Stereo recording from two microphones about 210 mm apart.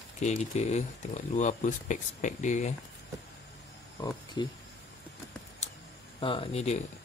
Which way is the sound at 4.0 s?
20° left (ahead or behind).